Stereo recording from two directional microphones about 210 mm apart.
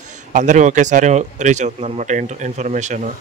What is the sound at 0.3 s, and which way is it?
Speech, 35° right (ahead or behind).